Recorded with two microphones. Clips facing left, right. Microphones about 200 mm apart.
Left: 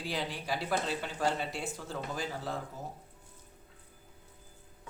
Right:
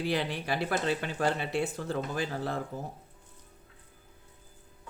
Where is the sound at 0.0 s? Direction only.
65° right (ahead or behind).